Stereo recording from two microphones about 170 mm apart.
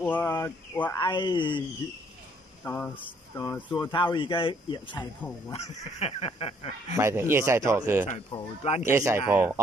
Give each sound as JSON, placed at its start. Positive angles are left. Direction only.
{"t": 0.0, "sound": "speech", "side_deg": 10}
{"t": 1.1, "sound": "speech", "side_deg": 25}
{"t": 2.6, "sound": "speech", "side_deg": 10}
{"t": 3.3, "sound": "speech", "side_deg": 25}
{"t": 7.0, "sound": "speech", "side_deg": -15}
{"t": 8.3, "sound": "speech", "side_deg": 35}
{"t": 8.8, "sound": "speech", "side_deg": -15}